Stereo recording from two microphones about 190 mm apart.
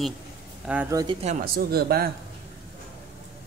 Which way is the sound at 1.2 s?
45° right (ahead or behind).